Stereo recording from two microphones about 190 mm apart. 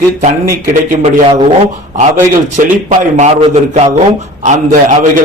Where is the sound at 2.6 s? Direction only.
45° right (ahead or behind).